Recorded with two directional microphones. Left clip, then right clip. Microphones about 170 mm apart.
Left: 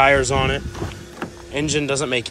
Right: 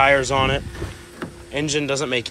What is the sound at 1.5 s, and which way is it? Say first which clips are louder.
Speech: left 1 dB; 15° left (ahead or behind).